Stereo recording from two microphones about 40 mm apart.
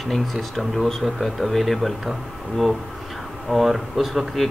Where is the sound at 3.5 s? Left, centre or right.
Centre.